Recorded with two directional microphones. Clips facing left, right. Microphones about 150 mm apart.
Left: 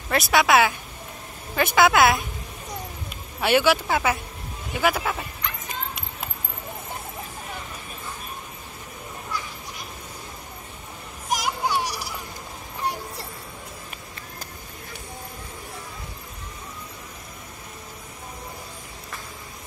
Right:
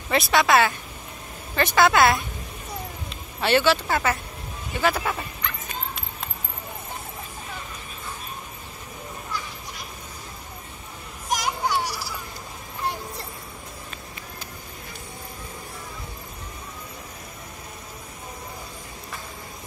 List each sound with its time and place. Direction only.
0.1 s a woman's voice: 5° left (ahead or behind)
1.8 s a woman's voice: 5° left (ahead or behind)
11.2 s children playing: 5° left (ahead or behind)
11.7 s a sound: 15° left (ahead or behind)